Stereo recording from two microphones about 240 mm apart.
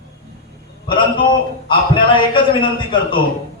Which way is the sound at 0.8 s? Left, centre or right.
Centre.